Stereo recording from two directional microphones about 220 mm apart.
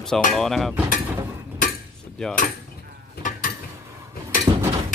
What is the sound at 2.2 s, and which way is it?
Speech, centre (ahead or behind).